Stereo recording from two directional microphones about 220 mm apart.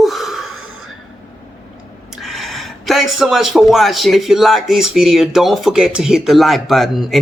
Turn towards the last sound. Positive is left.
turn(degrees=0)  # may be behind; listen again after turning